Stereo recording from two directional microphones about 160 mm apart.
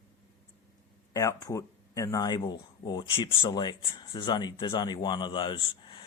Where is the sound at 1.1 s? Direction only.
20° left (ahead or behind).